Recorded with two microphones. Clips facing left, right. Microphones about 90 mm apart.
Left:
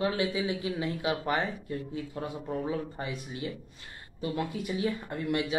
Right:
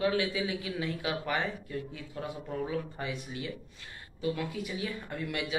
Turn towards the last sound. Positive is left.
turn(degrees=30)  # may be behind; listen again after turning